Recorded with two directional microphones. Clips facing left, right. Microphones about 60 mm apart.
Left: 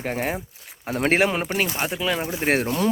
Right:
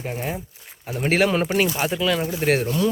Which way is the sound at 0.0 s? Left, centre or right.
Left.